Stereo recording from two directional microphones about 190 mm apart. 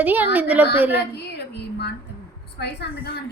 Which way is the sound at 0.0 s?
10° right (ahead or behind).